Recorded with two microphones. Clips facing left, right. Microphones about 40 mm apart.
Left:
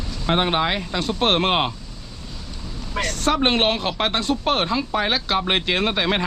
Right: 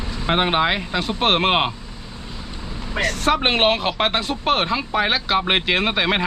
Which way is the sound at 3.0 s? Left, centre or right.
Centre.